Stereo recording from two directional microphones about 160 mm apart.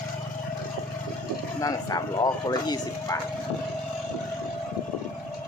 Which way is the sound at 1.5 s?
20° left (ahead or behind).